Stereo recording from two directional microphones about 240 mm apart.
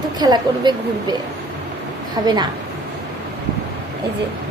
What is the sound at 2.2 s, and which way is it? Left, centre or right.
Speech, centre.